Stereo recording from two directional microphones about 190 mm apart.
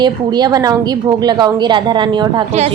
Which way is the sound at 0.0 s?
20° right (ahead or behind).